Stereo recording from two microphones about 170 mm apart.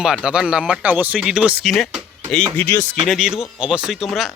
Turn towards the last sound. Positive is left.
turn(degrees=0)  # may be behind; listen again after turning